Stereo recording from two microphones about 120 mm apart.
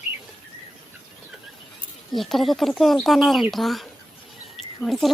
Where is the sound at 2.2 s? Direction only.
Centre (ahead or behind).